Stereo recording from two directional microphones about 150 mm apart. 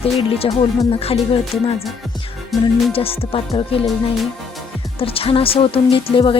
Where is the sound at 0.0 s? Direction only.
40° left (ahead or behind).